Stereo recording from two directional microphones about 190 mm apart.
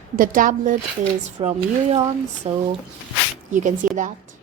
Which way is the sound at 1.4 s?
35° right (ahead or behind).